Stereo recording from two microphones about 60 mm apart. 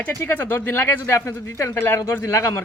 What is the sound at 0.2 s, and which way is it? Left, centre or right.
Speech, left.